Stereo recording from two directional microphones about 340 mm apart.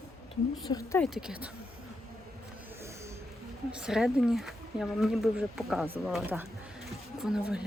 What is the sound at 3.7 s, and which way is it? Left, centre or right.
Speech, centre.